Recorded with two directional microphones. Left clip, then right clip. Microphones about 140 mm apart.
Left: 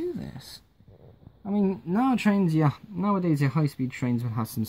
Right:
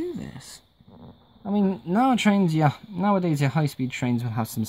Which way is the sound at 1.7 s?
40° right (ahead or behind).